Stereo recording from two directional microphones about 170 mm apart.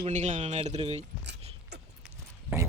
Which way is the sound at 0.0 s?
45° right (ahead or behind).